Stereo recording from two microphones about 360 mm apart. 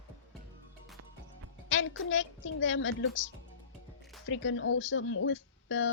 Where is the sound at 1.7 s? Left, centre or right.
Left.